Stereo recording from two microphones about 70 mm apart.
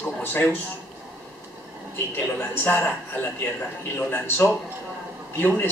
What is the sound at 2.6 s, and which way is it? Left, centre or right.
Speech, left.